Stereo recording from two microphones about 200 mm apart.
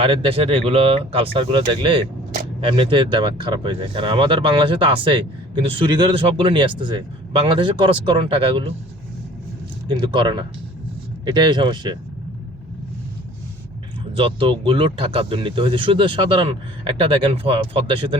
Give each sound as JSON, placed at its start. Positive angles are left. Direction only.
{"t": 0.0, "sound": "speech", "side_deg": -25}
{"t": 10.0, "sound": "speech", "side_deg": -20}
{"t": 14.2, "sound": "speech", "side_deg": -25}